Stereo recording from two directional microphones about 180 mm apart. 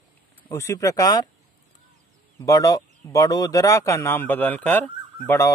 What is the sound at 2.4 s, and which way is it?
Speech, 20° left (ahead or behind).